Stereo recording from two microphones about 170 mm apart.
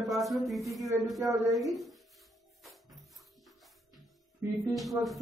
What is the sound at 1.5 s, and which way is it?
Music, centre (ahead or behind).